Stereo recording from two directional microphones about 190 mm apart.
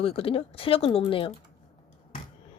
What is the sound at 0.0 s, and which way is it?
Speech, 30° left (ahead or behind).